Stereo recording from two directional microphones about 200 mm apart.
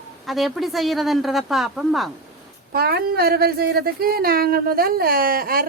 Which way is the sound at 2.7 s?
50° right (ahead or behind).